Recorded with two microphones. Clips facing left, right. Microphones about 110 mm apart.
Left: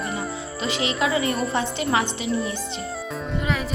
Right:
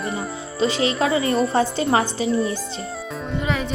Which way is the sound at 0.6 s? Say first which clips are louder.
Right 5 dB; 35° right (ahead or behind).